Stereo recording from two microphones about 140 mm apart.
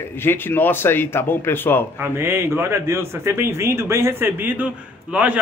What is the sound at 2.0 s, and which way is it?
Speech, 20° right (ahead or behind).